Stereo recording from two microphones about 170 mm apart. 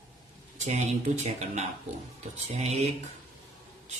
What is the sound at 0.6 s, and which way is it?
A man's voice, 40° right (ahead or behind).